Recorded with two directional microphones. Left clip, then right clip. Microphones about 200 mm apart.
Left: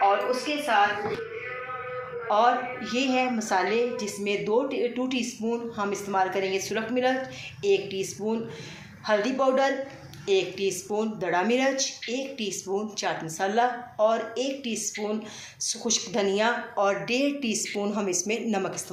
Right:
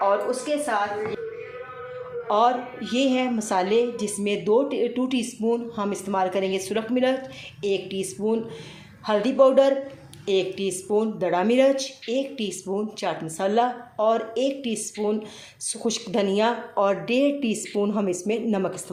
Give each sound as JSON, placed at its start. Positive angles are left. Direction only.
{"t": 2.2, "sound": "a woman's voice", "side_deg": -65}